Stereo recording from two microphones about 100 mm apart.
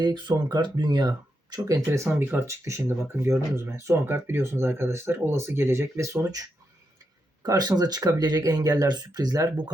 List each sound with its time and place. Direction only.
0.0 s speech: 45° right (ahead or behind)
1.6 s speech: 30° right (ahead or behind)
2.0 s speech: 20° right (ahead or behind)
7.4 s speech: 40° right (ahead or behind)